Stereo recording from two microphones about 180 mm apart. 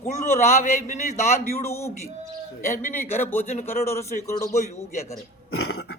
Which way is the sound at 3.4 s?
40° left (ahead or behind).